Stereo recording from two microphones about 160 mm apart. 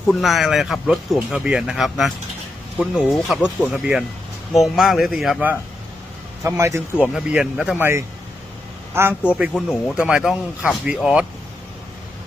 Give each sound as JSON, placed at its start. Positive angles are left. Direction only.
{"t": 0.1, "sound": "speech", "side_deg": 0}
{"t": 6.4, "sound": "a man's voice", "side_deg": -20}
{"t": 6.9, "sound": "a man's voice", "side_deg": -5}